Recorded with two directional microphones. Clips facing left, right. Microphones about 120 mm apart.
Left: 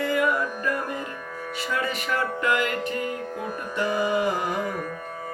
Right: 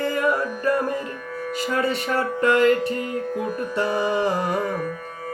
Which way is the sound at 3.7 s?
35° right (ahead or behind).